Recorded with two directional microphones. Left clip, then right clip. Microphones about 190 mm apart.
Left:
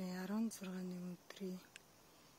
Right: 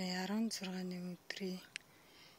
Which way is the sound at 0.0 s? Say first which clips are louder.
Right 4 dB; 10° right (ahead or behind).